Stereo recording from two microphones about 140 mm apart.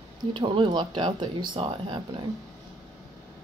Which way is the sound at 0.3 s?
35° right (ahead or behind).